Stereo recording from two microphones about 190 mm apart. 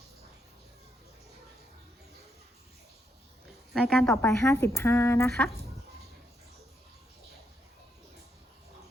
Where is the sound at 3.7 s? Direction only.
5° left (ahead or behind).